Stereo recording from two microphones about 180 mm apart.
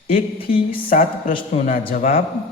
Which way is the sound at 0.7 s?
50° left (ahead or behind).